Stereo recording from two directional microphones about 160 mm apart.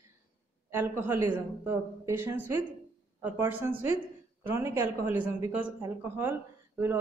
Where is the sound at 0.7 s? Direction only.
15° right (ahead or behind).